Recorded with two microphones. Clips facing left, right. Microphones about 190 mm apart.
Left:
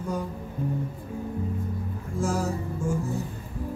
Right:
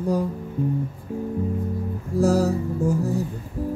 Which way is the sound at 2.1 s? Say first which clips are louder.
Right 8 dB; 35° right (ahead or behind).